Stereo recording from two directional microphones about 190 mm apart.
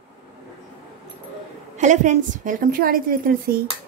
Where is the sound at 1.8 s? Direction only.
40° right (ahead or behind).